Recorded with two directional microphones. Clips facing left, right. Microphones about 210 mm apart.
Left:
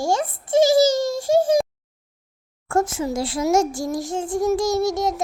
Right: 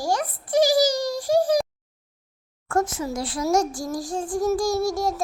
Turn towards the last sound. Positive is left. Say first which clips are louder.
# left 2 dB
turn(degrees=20)  # may be behind; listen again after turning